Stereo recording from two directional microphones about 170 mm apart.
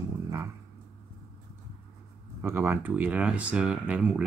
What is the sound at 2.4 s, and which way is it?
Speech, 10° right (ahead or behind).